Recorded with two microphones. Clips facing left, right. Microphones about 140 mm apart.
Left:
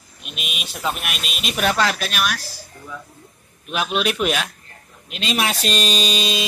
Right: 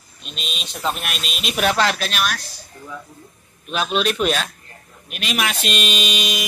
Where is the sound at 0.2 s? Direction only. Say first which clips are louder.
Even; 10° left (ahead or behind).